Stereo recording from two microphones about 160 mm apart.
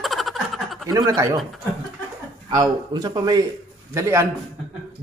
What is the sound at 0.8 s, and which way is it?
Speech, 20° right (ahead or behind).